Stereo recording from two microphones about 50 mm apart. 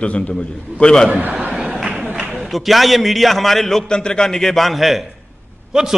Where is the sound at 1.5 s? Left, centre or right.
Centre.